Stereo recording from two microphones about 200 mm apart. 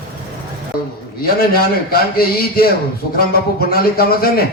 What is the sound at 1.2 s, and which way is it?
A man's voice, 50° left (ahead or behind).